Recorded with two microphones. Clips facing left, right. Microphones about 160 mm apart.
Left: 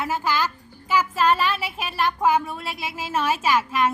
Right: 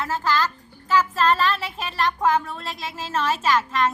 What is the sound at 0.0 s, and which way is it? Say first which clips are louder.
A woman's voice: right 1 dB; 10° left (ahead or behind).